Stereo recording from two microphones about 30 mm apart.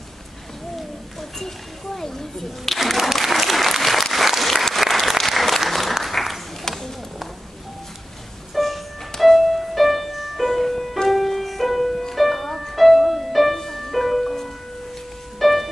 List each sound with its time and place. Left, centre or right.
2.0 s a sound: centre
2.7 s applause: centre
6.7 s clip-clop: centre
8.5 s music: centre
15.3 s music: centre